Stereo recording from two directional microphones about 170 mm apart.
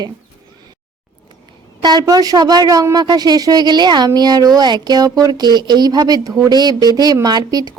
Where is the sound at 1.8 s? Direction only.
25° right (ahead or behind).